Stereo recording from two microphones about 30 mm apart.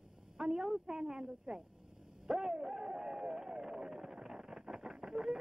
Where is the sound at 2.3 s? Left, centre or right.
Right.